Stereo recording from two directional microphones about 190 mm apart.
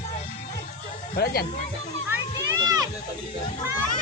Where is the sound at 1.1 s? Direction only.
50° left (ahead or behind).